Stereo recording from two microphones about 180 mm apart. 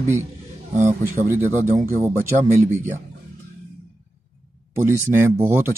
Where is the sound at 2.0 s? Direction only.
15° right (ahead or behind).